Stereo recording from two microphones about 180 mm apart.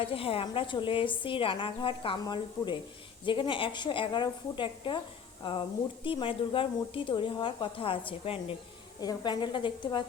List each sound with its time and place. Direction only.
0.0 s speech: 30° left (ahead or behind)